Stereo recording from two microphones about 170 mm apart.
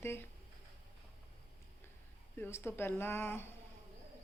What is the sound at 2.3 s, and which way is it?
A woman's voice, 15° left (ahead or behind).